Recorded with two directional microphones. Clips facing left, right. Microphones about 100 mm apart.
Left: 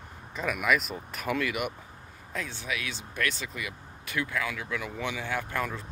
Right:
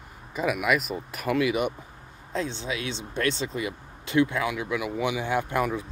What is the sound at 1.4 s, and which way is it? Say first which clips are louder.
Speech: right 6 dB; 25° right (ahead or behind).